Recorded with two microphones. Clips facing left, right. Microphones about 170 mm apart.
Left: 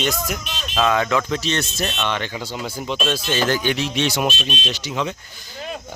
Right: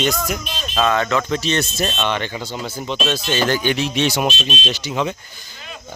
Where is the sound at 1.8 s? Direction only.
20° right (ahead or behind).